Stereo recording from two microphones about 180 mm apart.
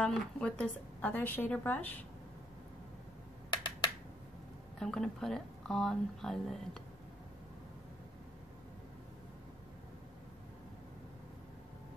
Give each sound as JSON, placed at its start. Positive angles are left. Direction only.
{"t": 0.0, "sound": "a woman's voice", "side_deg": 5}
{"t": 3.4, "sound": "a sound", "side_deg": 25}
{"t": 4.7, "sound": "speech", "side_deg": 5}